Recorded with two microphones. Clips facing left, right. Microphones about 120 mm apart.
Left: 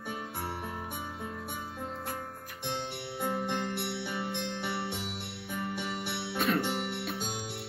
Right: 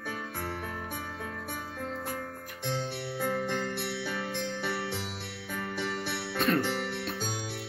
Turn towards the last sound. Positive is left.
turn(degrees=20)  # may be behind; listen again after turning